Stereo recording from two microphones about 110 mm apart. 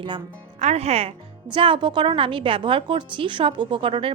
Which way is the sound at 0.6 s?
75° right (ahead or behind).